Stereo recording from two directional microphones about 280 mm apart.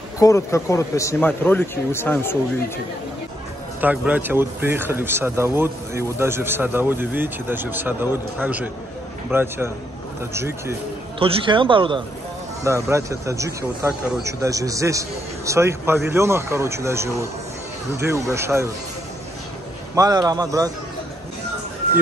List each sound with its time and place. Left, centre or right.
0.2 s a man's voice: centre
3.8 s a man's voice: centre
20.0 s speech: centre